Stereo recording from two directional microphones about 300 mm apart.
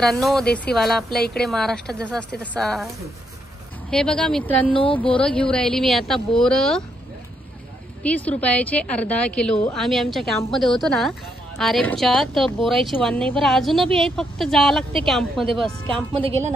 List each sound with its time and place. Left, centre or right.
0.0 s a woman's voice: centre
3.9 s a woman's voice: centre
8.0 s a woman's voice: centre
16.2 s a woman's voice: centre